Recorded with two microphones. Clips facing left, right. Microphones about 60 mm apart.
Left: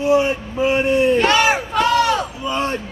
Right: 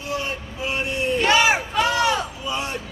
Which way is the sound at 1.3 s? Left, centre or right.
Centre.